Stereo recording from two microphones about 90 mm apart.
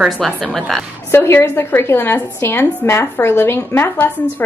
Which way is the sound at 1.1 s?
25° left (ahead or behind).